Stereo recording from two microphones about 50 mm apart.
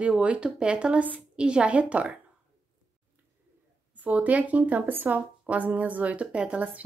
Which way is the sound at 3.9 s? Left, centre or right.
Right.